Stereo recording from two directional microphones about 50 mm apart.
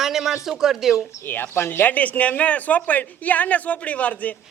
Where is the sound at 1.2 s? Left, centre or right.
Left.